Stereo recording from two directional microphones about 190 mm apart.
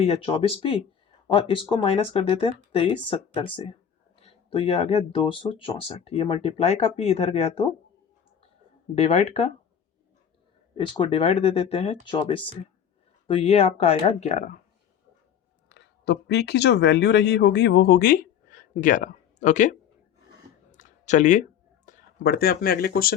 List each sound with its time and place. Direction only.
0.0 s speech: 30° left (ahead or behind)
9.0 s speech: 35° left (ahead or behind)
10.8 s speech: 25° left (ahead or behind); by 14.6 s 40° left (ahead or behind)
15.7 s speech: 60° left (ahead or behind); by 19.7 s 40° left (ahead or behind)
20.7 s a sound: 40° left (ahead or behind)
21.8 s speech: 50° left (ahead or behind)